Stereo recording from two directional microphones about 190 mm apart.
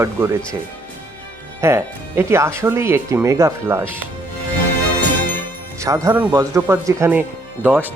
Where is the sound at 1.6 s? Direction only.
15° right (ahead or behind).